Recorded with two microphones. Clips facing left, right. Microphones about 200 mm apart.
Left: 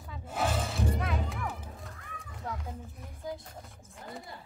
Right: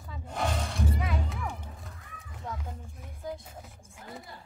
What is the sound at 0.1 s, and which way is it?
Music, 5° left (ahead or behind).